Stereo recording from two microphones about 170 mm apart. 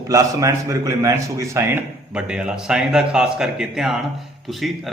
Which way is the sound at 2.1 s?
5° right (ahead or behind).